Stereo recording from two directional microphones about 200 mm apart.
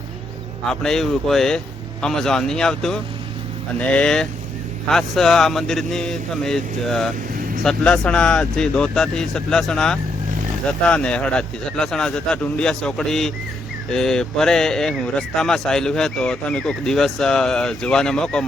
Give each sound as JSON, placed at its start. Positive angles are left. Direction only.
{"t": 0.7, "sound": "speech", "side_deg": 0}